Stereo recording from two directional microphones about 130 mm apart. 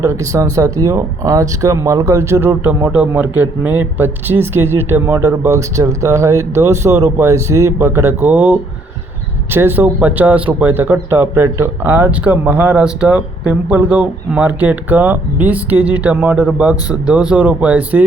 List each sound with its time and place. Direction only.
0.0 s speech: 20° right (ahead or behind)